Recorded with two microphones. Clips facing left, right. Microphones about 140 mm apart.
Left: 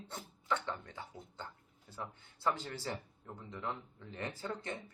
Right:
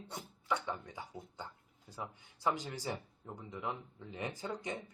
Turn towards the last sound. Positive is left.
turn(degrees=-15)  # may be behind; listen again after turning